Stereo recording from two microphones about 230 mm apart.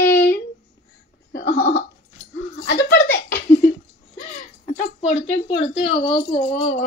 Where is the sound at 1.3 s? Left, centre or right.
Left.